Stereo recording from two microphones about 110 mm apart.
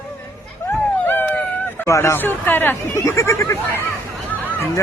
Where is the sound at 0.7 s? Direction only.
20° left (ahead or behind).